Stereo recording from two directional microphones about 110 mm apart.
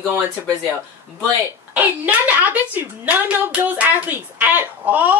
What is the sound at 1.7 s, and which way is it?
A woman's voice, 15° right (ahead or behind).